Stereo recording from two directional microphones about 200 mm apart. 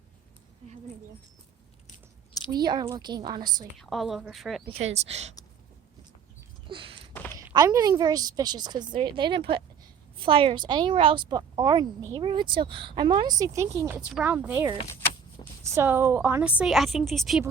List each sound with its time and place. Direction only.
2.5 s speech: 20° right (ahead or behind)
3.8 s a woman's voice: centre (ahead or behind)
4.7 s speech: 30° right (ahead or behind)
6.7 s a sound: 25° right (ahead or behind)
7.1 s a sound: 10° left (ahead or behind)
7.3 s a woman's voice: 20° right (ahead or behind); by 17.4 s centre (ahead or behind)